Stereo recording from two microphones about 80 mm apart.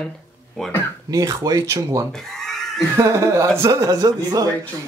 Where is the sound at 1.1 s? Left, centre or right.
Right.